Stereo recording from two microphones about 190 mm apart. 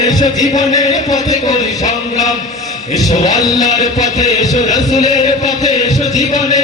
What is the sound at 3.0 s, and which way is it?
Heart murmur, 20° left (ahead or behind).